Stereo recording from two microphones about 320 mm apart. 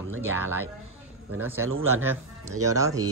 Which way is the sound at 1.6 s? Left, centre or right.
Right.